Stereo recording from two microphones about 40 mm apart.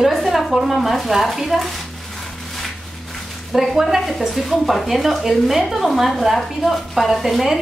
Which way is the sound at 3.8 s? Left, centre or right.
Centre.